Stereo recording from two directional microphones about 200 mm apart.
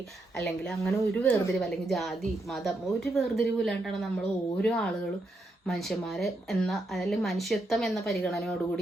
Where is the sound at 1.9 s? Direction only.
Centre (ahead or behind).